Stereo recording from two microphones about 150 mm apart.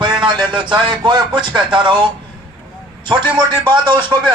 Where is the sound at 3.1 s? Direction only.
30° right (ahead or behind).